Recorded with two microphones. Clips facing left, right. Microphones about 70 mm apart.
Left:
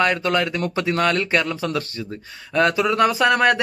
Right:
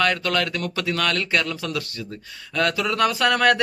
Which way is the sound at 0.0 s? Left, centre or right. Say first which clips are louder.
Left 2 dB; left.